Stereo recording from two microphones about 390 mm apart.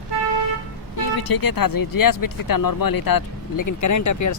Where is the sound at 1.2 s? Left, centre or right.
Left.